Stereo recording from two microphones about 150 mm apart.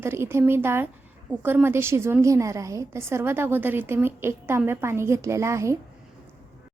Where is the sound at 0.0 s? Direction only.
15° right (ahead or behind).